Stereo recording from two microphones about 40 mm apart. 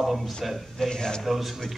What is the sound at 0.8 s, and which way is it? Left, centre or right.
Speech, centre.